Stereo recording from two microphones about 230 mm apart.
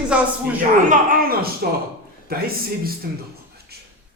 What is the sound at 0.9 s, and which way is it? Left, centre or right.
Speech, right.